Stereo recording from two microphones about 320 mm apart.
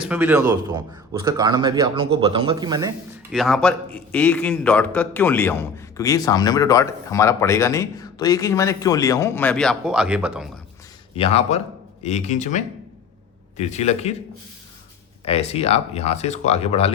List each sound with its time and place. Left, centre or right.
0.0 s speech: centre
3.3 s a man's voice: centre
11.1 s speech: centre
15.2 s speech: centre